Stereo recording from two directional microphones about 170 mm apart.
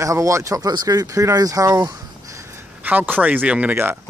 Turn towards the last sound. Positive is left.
turn(degrees=-10)  # may be behind; listen again after turning